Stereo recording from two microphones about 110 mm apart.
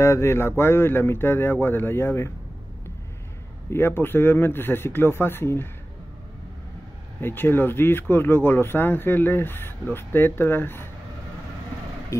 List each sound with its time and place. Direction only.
0.0 s speech: 25° left (ahead or behind)
3.7 s speech: 20° left (ahead or behind)
7.2 s speech: 20° left (ahead or behind)
12.1 s vehicle: 25° left (ahead or behind)